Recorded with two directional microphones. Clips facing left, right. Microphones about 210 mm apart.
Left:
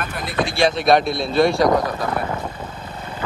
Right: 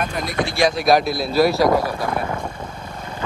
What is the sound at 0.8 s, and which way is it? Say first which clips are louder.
Speech: even; centre (ahead or behind).